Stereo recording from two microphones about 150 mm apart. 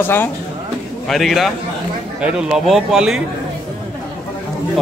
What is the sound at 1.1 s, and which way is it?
A man's voice, centre (ahead or behind).